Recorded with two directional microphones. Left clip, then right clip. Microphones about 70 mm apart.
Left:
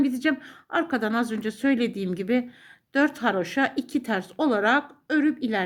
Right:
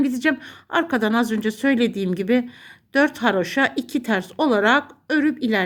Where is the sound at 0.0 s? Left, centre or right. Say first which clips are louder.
Right 4 dB; right.